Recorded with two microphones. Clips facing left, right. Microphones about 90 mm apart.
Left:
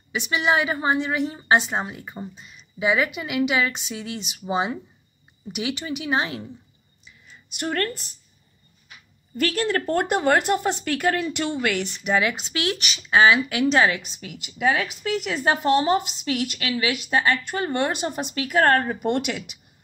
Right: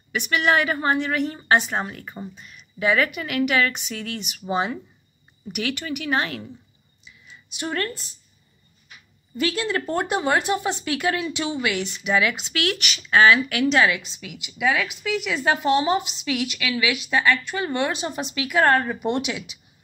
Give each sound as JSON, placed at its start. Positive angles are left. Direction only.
{"t": 0.3, "sound": "speech", "side_deg": 15}
{"t": 7.1, "sound": "a sound", "side_deg": 45}
{"t": 9.4, "sound": "speech", "side_deg": 55}
{"t": 12.2, "sound": "a woman's voice", "side_deg": 35}
{"t": 19.0, "sound": "speech", "side_deg": 55}